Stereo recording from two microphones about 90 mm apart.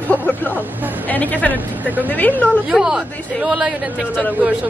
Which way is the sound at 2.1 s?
20° left (ahead or behind).